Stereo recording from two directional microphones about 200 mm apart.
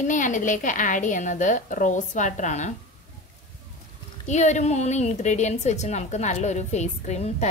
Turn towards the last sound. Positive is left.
turn(degrees=35)  # may be behind; listen again after turning